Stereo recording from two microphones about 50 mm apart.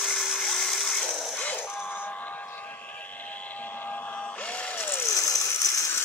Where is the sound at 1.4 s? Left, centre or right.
Left.